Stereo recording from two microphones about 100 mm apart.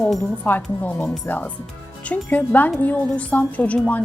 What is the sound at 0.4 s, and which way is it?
Speech, 20° left (ahead or behind).